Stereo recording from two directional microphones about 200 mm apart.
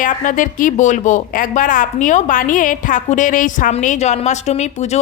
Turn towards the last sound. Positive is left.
turn(degrees=35)  # may be behind; listen again after turning